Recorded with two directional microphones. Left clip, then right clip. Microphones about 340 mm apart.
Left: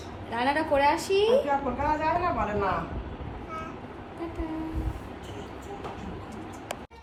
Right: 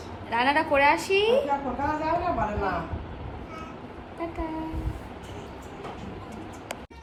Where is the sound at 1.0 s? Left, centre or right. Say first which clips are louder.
Right 1 dB; centre.